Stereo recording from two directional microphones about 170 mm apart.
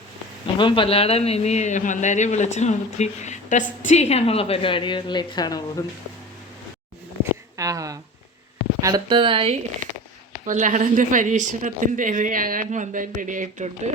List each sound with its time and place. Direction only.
0.6 s a man's voice: 30° left (ahead or behind)
7.5 s a woman's voice: 20° right (ahead or behind)
9.8 s a sound: 50° right (ahead or behind)
10.4 s a woman's voice: 45° right (ahead or behind)